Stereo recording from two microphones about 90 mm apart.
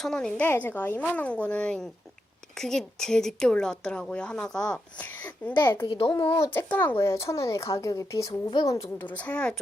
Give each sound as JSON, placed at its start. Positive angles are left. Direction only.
{"t": 0.0, "sound": "a woman's voice", "side_deg": 5}
{"t": 6.2, "sound": "speech", "side_deg": 25}
{"t": 8.3, "sound": "a woman's voice", "side_deg": 60}
{"t": 8.6, "sound": "speech", "side_deg": 40}
{"t": 9.0, "sound": "a woman's voice", "side_deg": 15}